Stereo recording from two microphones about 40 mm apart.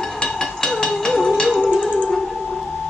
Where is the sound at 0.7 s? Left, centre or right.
Centre.